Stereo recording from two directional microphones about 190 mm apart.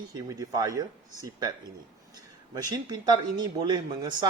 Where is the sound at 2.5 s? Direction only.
20° right (ahead or behind).